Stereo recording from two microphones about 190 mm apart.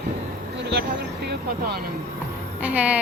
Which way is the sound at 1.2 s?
60° right (ahead or behind).